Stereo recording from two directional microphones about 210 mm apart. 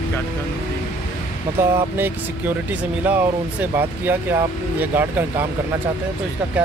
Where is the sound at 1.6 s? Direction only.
10° right (ahead or behind).